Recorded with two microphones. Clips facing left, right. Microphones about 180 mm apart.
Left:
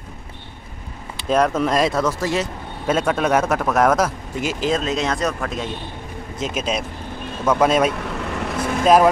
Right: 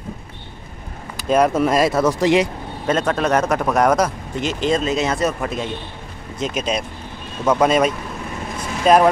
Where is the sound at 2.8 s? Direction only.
5° left (ahead or behind).